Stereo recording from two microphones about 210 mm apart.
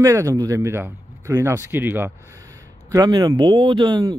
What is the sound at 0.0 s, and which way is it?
Speech, 15° right (ahead or behind).